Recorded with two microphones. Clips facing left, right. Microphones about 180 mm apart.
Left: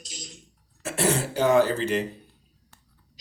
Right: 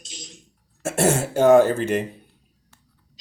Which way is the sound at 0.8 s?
50° right (ahead or behind).